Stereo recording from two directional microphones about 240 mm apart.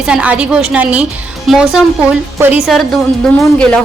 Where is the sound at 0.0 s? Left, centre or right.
Centre.